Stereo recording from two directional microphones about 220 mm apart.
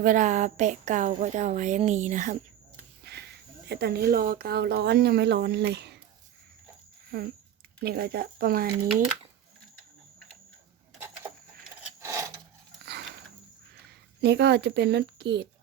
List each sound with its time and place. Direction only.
0.0 s speech: 35° right (ahead or behind)
3.0 s speech: 45° right (ahead or behind)
7.1 s speech: 45° right (ahead or behind)
11.8 s a sound: 15° right (ahead or behind)
12.8 s a sound: 50° right (ahead or behind)
14.3 s speech: 50° right (ahead or behind)